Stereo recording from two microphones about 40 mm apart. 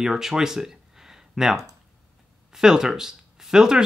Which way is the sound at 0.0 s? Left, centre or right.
Centre.